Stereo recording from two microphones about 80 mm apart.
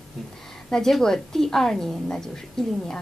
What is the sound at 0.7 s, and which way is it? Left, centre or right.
A woman's voice, centre.